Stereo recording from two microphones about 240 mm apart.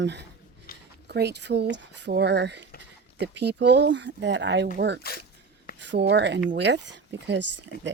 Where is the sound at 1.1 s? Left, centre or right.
Right.